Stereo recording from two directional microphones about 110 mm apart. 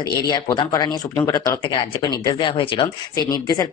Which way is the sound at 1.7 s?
40° left (ahead or behind).